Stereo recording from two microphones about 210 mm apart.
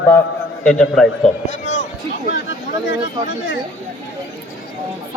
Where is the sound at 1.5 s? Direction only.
35° left (ahead or behind).